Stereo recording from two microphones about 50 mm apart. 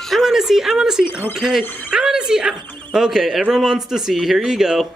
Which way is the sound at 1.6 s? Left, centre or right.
Right.